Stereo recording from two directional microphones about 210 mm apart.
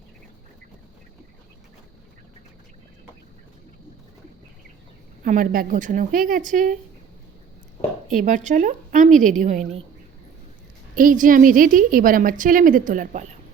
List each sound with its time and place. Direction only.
5.2 s a woman's voice: 40° right (ahead or behind)
8.1 s a woman's voice: 35° right (ahead or behind)
10.9 s a woman's voice: 40° right (ahead or behind)